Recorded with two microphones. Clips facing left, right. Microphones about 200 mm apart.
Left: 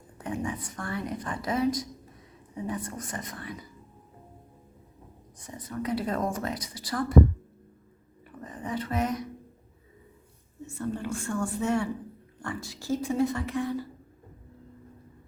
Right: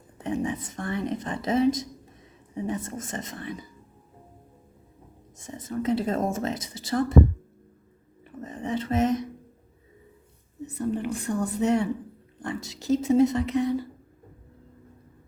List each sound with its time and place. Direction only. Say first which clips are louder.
0.2 s a woman's voice: right 4 dB; 20° right (ahead or behind)
5.4 s a woman's voice: right 4 dB; 25° right (ahead or behind)
8.2 s a sound: right 4 dB; 25° right (ahead or behind)
10.7 s a woman's voice: right 4 dB; 20° right (ahead or behind)